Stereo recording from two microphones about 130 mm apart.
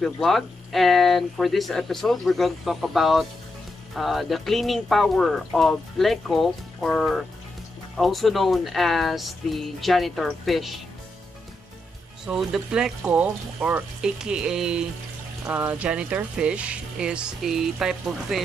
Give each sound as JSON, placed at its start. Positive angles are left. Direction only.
{"t": 0.0, "sound": "speech", "side_deg": 0}
{"t": 12.3, "sound": "speech", "side_deg": -5}